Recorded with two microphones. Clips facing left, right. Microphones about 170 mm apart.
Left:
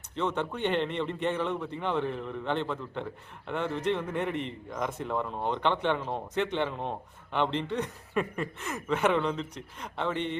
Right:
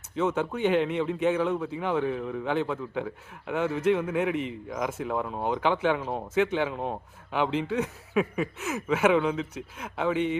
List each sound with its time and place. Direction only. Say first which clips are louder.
0.2 s a man's voice: right 4 dB; 5° right (ahead or behind)